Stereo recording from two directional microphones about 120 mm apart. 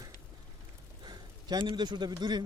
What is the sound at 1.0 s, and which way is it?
A man's voice, 40° right (ahead or behind).